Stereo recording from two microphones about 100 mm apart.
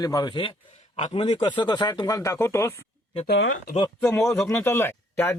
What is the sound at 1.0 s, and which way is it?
Speech, 80° left.